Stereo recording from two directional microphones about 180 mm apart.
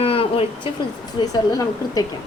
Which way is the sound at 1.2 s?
20° left (ahead or behind).